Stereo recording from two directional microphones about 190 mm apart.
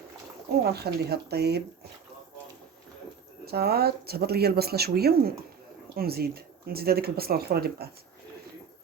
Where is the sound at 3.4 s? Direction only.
55° right (ahead or behind).